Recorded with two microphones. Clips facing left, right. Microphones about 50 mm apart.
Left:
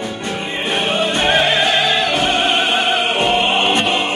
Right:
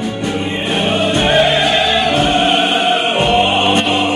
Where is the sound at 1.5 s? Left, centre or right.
Centre.